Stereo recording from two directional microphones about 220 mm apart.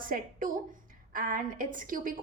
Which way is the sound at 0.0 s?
40° right (ahead or behind).